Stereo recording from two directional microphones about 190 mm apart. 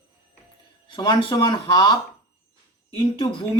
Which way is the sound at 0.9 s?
25° left (ahead or behind).